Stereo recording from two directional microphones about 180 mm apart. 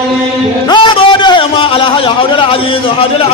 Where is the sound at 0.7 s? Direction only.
25° left (ahead or behind).